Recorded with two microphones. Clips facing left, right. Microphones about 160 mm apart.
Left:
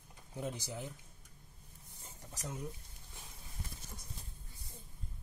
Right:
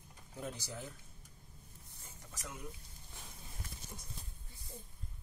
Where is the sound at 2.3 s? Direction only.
35° left (ahead or behind).